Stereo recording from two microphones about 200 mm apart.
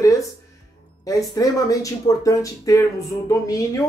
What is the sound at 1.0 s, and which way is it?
Speech, 15° left (ahead or behind).